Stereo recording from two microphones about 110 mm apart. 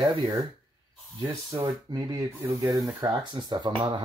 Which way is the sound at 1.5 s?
35° right (ahead or behind).